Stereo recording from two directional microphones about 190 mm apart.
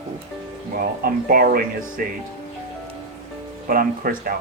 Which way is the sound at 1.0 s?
50° right (ahead or behind).